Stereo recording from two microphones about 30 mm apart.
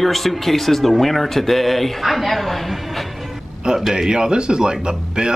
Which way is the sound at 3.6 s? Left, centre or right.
Right.